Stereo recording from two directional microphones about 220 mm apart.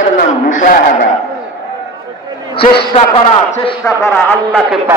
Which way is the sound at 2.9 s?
25° left (ahead or behind).